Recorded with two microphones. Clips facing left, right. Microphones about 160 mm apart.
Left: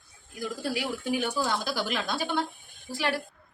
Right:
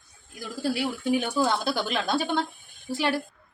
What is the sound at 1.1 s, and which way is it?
Speech, 25° right (ahead or behind).